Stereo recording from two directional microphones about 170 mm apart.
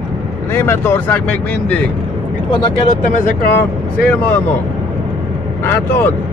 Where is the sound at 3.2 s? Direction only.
65° left (ahead or behind).